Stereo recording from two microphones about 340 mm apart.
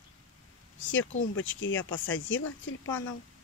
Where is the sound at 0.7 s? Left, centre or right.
Left.